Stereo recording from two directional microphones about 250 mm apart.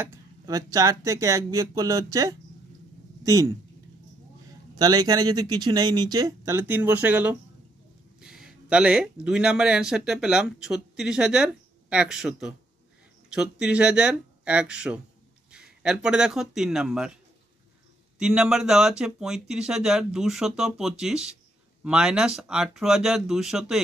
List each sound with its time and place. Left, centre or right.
0.0 s speech: centre
4.7 s a man's voice: centre
18.2 s speech: centre